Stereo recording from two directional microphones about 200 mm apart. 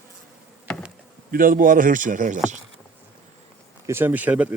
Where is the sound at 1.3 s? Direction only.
45° right (ahead or behind).